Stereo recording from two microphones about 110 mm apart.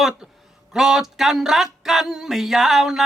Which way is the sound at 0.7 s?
5° right (ahead or behind).